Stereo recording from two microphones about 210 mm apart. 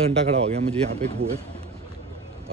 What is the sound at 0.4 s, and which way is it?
Speech, 30° right (ahead or behind).